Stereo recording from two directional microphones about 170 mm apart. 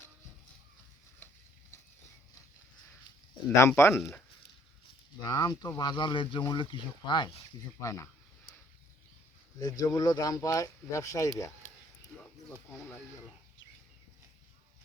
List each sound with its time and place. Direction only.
3.5 s speech: 15° left (ahead or behind)
5.2 s speech: 25° left (ahead or behind)
9.6 s speech: 20° left (ahead or behind)
12.1 s speech: 5° left (ahead or behind)